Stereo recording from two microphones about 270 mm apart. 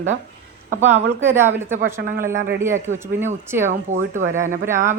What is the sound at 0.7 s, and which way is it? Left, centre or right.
Speech, right.